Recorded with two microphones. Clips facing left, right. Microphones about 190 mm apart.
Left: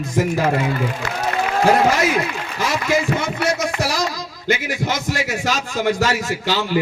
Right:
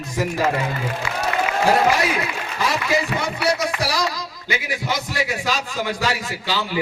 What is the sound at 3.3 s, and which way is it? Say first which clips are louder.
A man's voice: left 1 dB; 45° left (ahead or behind).